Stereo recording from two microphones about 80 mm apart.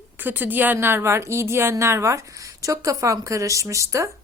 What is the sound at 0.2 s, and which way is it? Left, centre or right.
A woman's voice, right.